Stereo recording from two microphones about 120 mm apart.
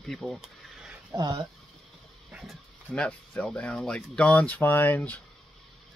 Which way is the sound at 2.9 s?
10° left (ahead or behind).